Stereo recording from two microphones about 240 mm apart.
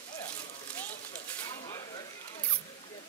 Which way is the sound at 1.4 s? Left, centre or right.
Centre.